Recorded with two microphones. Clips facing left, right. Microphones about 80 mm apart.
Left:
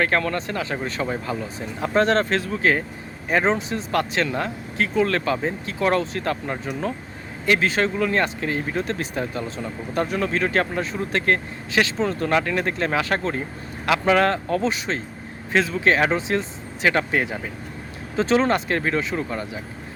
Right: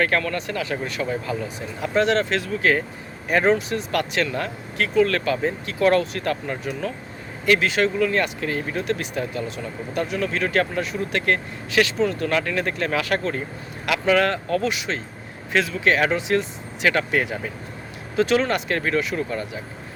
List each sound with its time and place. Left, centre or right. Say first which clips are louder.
0.0 s speech: even; left